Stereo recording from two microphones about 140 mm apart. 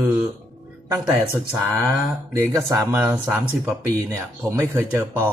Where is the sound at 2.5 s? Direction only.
20° right (ahead or behind).